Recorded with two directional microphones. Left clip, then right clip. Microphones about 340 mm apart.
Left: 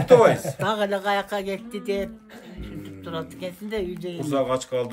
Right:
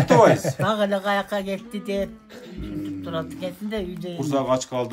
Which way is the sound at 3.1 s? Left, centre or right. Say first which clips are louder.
Even; centre.